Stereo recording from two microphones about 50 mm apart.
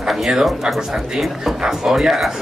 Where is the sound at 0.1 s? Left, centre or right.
Centre.